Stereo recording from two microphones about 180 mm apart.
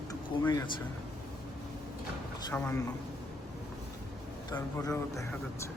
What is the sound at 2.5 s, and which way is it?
Speech, 10° left (ahead or behind).